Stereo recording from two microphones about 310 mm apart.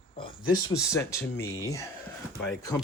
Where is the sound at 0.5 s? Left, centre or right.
Centre.